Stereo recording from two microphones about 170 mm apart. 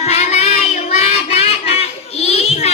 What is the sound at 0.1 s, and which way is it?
Child singing, 40° left (ahead or behind).